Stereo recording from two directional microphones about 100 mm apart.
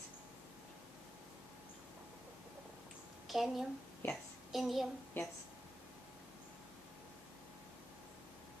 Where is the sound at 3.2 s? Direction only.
Centre (ahead or behind).